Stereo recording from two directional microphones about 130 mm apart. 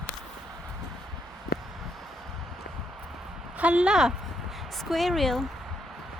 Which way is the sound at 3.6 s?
10° right (ahead or behind).